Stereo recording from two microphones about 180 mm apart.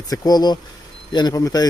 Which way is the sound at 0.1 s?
20° left (ahead or behind).